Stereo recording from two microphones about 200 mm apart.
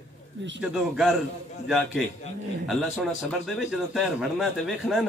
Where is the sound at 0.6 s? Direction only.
5° right (ahead or behind).